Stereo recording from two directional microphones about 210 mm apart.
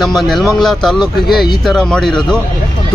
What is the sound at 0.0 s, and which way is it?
Speech, centre (ahead or behind).